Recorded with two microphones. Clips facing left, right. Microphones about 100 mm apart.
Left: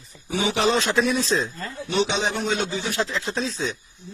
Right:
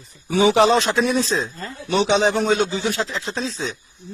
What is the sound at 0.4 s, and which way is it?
Speech, 40° right (ahead or behind).